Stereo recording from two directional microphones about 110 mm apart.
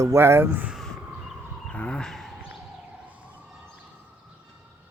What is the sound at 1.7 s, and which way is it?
Speech, 10° left (ahead or behind).